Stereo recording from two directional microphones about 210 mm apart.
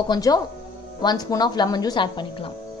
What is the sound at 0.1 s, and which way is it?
Speech, 20° left (ahead or behind).